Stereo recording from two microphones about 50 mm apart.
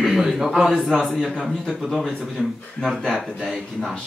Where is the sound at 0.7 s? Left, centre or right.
Centre.